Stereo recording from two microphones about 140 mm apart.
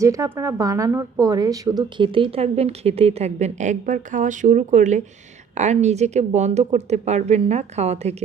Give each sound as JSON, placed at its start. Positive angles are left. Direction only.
{"t": 0.0, "sound": "a woman's voice", "side_deg": -20}